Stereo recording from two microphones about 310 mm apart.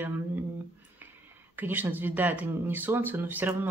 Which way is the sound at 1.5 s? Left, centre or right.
Centre.